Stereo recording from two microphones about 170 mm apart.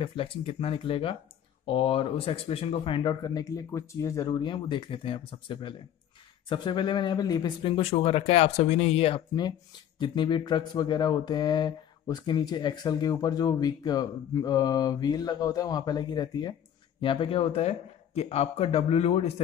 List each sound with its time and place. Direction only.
0.0 s speech: 30° left (ahead or behind)